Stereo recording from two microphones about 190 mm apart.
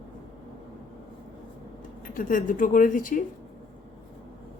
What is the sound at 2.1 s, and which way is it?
A woman's voice, 45° left (ahead or behind).